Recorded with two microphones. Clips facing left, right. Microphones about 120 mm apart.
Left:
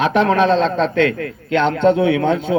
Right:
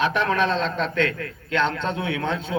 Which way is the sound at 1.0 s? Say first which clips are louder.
Left 8 dB; 35° right (ahead or behind).